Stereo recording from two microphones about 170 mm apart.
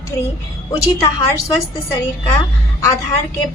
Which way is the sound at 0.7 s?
20° left (ahead or behind).